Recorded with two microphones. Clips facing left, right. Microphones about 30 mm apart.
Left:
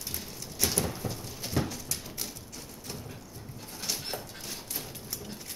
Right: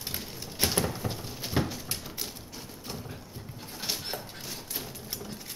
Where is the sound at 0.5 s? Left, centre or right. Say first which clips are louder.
Right 2 dB; right.